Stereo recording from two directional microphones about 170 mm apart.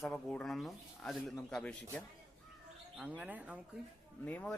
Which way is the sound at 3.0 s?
10° right (ahead or behind).